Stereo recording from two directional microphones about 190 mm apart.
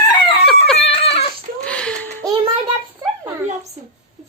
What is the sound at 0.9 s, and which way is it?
Dog, 30° left (ahead or behind).